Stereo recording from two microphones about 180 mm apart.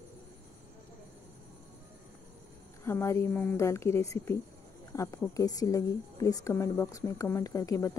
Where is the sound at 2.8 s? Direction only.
15° left (ahead or behind).